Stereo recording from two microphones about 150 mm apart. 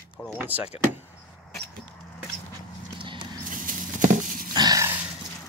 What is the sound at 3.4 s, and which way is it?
Patter, 65° right (ahead or behind).